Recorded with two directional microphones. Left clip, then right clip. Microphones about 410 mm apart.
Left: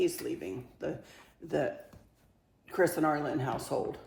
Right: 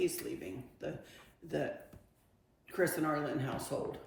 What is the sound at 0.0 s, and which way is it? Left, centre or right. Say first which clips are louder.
Speech: left 4 dB; centre.